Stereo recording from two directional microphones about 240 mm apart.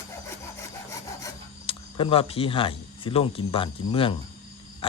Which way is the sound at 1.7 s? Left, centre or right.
Left.